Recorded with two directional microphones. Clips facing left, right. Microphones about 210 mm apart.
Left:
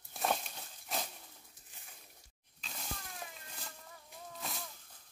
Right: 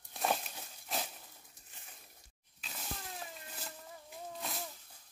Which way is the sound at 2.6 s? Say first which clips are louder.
Even; 5° right (ahead or behind).